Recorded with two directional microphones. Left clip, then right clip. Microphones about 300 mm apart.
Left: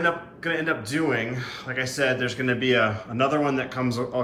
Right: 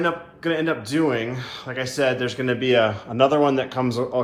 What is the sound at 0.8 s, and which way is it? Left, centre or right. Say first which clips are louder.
Speech: right 3 dB; centre.